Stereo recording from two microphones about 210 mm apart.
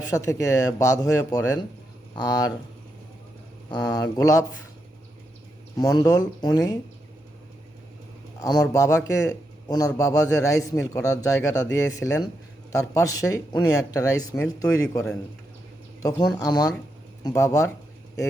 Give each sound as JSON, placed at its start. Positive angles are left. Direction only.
{"t": 0.1, "sound": "a man's voice", "side_deg": 15}
{"t": 3.7, "sound": "speech", "side_deg": 20}
{"t": 5.7, "sound": "speech", "side_deg": 20}
{"t": 8.4, "sound": "a man's voice", "side_deg": 20}
{"t": 16.0, "sound": "a man's voice", "side_deg": 15}